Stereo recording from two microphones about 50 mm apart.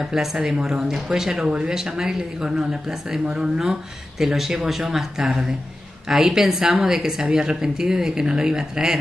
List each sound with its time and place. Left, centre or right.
0.0 s speech: centre
1.5 s speech: right